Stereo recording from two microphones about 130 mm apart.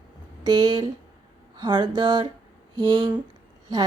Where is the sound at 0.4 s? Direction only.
35° right (ahead or behind).